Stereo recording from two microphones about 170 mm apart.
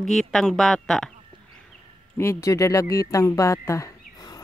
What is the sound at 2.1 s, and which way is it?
Speech, 15° left (ahead or behind).